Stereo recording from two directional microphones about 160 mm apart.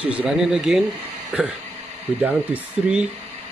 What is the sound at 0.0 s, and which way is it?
Speech, 5° right (ahead or behind).